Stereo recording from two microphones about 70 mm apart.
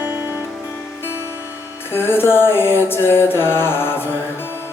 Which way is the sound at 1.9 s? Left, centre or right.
Left.